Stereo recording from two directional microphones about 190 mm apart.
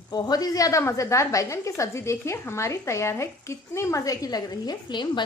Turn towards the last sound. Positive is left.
turn(degrees=25)  # may be behind; listen again after turning